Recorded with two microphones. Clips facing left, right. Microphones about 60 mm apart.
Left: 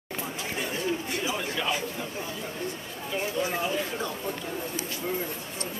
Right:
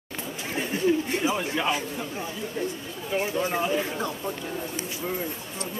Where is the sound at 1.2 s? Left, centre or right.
Right.